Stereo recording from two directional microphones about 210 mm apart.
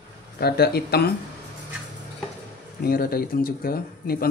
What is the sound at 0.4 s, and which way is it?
Speech, 50° left (ahead or behind).